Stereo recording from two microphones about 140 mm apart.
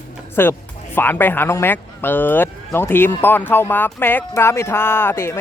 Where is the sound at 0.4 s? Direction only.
15° left (ahead or behind).